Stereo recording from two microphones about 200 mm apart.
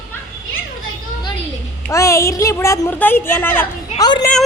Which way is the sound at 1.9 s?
15° left (ahead or behind).